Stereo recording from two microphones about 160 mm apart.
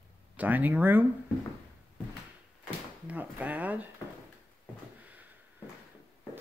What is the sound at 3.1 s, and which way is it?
Speech, 10° right (ahead or behind).